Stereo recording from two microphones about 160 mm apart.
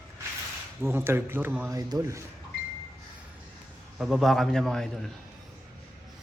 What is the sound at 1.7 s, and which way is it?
Speech, 25° right (ahead or behind).